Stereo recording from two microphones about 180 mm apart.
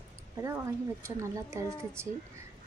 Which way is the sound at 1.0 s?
15° right (ahead or behind).